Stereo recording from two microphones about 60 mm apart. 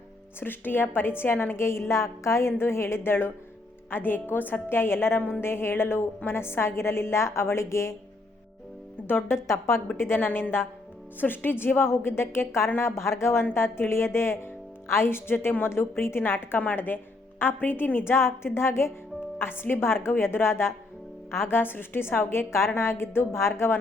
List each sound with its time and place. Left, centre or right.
0.3 s a woman's voice: left
2.6 s a woman's voice: left
9.0 s a woman's voice: left
10.2 s a woman's voice: left